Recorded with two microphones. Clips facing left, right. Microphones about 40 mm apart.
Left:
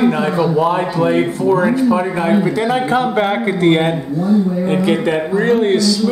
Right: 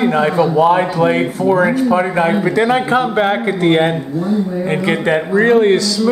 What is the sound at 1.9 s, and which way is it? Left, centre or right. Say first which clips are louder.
A man's voice: right 1 dB; centre.